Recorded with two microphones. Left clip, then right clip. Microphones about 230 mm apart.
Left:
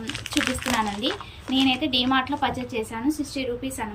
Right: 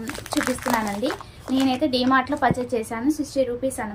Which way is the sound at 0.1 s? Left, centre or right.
Right.